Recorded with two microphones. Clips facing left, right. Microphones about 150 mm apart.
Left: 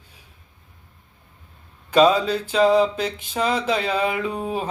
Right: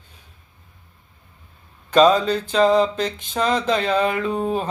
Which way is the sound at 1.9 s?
10° left (ahead or behind).